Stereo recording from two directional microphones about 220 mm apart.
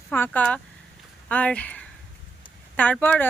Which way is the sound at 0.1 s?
5° left (ahead or behind).